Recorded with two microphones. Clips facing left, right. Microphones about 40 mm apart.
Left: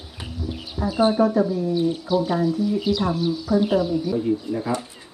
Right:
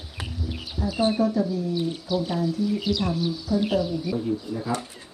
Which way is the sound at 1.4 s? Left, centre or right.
Left.